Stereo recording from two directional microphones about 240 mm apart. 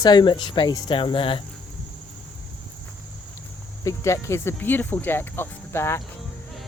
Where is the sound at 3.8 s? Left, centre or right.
Centre.